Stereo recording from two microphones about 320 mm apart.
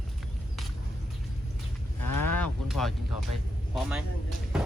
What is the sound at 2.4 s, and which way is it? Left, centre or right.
Music, centre.